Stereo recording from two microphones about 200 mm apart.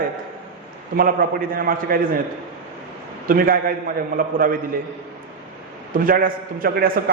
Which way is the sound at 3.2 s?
45° right (ahead or behind).